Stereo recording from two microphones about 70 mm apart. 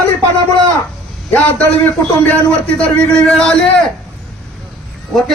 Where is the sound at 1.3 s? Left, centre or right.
Left; by 3.6 s centre.